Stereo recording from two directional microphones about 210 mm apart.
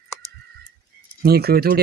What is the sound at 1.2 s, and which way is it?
Speech, 50° right (ahead or behind).